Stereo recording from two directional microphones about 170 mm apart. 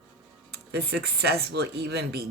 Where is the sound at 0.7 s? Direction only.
70° right (ahead or behind).